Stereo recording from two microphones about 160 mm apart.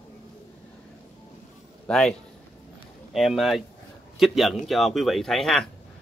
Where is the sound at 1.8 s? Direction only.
5° left (ahead or behind).